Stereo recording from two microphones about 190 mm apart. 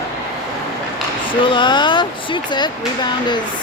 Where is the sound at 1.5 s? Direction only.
25° left (ahead or behind).